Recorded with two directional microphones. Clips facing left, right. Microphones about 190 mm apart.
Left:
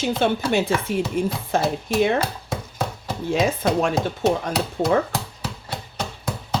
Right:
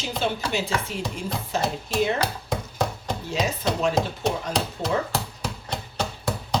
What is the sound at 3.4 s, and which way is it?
Speech, 55° left (ahead or behind).